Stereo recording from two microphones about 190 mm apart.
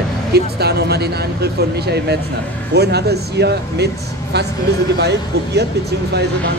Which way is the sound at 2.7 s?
60° right (ahead or behind).